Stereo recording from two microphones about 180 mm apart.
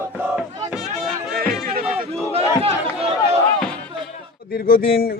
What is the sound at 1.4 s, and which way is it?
Music, 55° right (ahead or behind).